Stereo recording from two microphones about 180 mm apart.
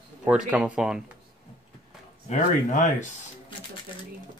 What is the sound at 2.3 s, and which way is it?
Speech, 45° left (ahead or behind).